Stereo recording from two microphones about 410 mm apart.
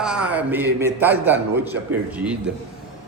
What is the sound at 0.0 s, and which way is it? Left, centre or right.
A man's voice, centre.